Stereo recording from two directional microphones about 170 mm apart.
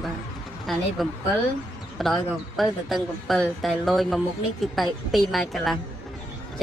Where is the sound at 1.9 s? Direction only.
Centre (ahead or behind).